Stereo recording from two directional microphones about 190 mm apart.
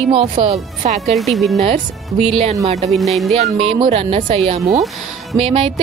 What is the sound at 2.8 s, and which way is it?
Speech, centre (ahead or behind).